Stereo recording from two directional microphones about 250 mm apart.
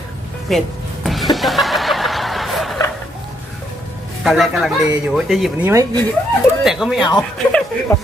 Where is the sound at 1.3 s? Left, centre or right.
Centre.